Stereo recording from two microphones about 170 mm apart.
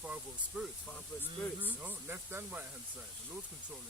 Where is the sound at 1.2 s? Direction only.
10° right (ahead or behind).